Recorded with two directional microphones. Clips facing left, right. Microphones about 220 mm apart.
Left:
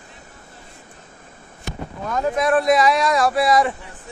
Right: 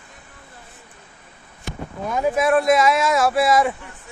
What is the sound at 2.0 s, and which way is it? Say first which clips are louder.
Speech: right 1 dB; 10° right (ahead or behind).